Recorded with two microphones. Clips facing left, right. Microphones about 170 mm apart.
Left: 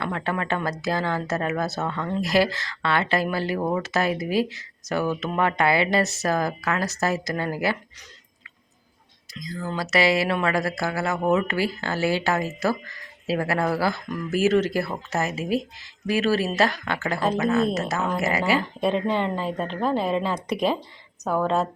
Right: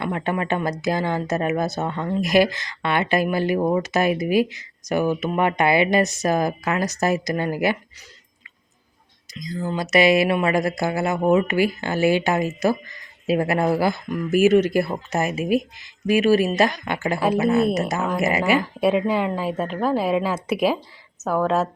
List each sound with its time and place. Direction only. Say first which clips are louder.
0.0 s speech: right 3 dB; 15° right (ahead or behind)
9.3 s a woman's voice: right 4 dB; 20° right (ahead or behind); by 21.7 s 5° right (ahead or behind)